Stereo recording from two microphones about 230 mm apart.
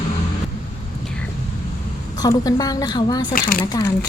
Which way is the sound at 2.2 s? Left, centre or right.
Centre.